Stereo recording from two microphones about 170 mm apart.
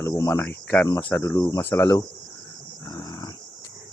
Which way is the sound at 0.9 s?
20° left (ahead or behind).